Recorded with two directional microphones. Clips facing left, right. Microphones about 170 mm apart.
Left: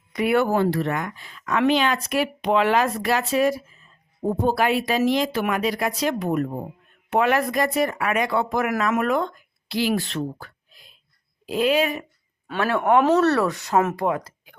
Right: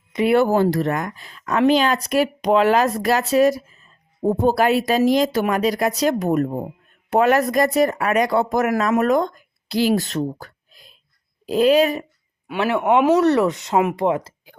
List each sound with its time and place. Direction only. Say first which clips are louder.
0.1 s speech: right 4 dB; 25° right (ahead or behind)
12.5 s speech: right 2 dB; 15° right (ahead or behind)